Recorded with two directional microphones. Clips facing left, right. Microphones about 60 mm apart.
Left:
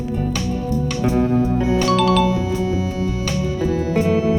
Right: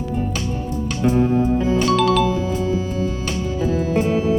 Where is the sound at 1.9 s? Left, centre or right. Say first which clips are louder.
Left 1 dB; centre.